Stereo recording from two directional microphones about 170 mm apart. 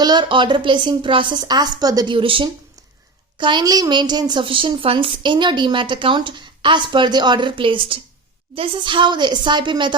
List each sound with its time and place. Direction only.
0.0 s a woman's voice: 25° right (ahead or behind)